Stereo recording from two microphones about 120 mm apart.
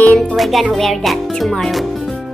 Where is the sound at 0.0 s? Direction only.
10° left (ahead or behind).